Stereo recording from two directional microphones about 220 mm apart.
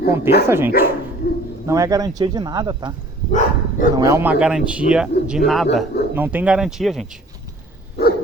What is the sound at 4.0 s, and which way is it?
A man's voice, 10° right (ahead or behind).